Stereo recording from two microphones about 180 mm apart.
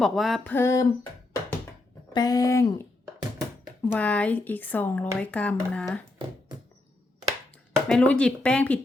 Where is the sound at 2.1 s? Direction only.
20° left (ahead or behind); by 6.0 s 5° left (ahead or behind).